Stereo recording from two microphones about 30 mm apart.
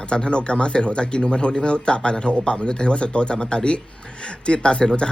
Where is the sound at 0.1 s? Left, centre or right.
Left.